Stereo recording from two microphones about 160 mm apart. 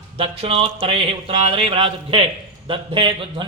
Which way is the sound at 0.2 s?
35° right (ahead or behind).